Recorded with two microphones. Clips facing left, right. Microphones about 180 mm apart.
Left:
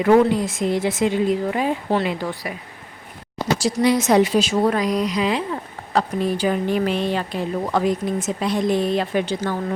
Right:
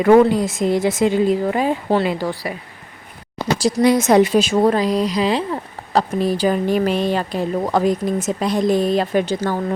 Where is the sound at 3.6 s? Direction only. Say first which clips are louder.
Right 4 dB; 45° right (ahead or behind).